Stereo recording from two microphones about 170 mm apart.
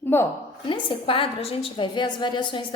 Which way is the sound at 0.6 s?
30° left (ahead or behind).